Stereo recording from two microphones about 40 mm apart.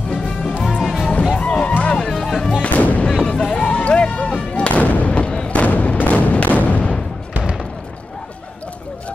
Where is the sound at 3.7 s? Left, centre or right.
Left.